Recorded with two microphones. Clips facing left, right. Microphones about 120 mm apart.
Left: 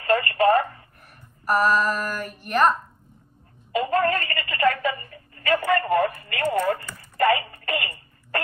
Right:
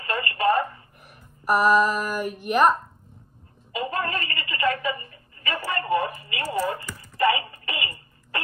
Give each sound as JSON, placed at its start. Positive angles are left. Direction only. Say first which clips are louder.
{"t": 0.0, "sound": "telephone", "louder": "left 6 dB", "side_deg": 45}
{"t": 1.4, "sound": "a sound", "louder": "right 2 dB", "side_deg": -10}
{"t": 3.8, "sound": "a woman's voice", "louder": "left 5 dB", "side_deg": 45}